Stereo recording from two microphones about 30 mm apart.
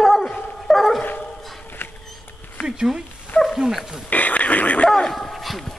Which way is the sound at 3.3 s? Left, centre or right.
Left.